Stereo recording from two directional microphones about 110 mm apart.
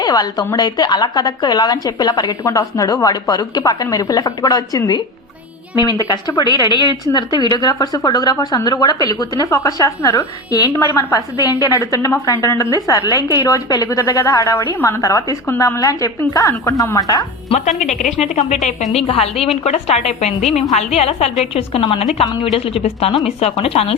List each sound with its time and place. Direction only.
0.0 s a woman's voice: 35° left (ahead or behind)
17.5 s a woman's voice: 90° left
18.9 s speech: 65° left (ahead or behind)
19.6 s a woman's voice: 80° left; by 23.9 s 65° left (ahead or behind)